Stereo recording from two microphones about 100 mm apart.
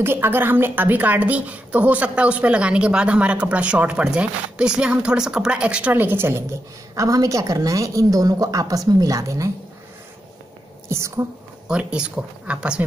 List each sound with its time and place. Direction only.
0.0 s a woman's voice: 20° right (ahead or behind)
7.0 s a woman's voice: 35° right (ahead or behind)
10.9 s a woman's voice: 30° right (ahead or behind)
11.6 s a woman's voice: 10° right (ahead or behind)